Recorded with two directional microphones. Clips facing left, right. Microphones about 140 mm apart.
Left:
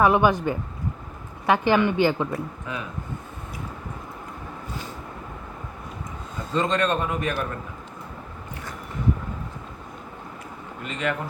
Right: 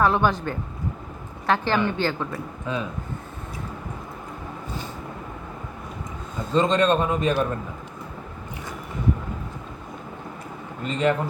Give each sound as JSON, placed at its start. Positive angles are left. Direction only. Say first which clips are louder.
{"t": 0.0, "sound": "a woman's voice", "louder": "left 2 dB", "side_deg": 15}
{"t": 2.7, "sound": "a man's voice", "louder": "right 7 dB", "side_deg": -25}
{"t": 6.5, "sound": "a man's voice", "louder": "right 4 dB", "side_deg": -20}
{"t": 10.8, "sound": "speech", "louder": "right 6 dB", "side_deg": -30}